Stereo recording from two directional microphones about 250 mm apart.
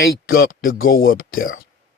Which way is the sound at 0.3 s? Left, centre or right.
Left.